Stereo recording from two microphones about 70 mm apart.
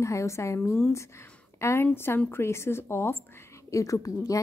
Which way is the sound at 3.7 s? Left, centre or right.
Left.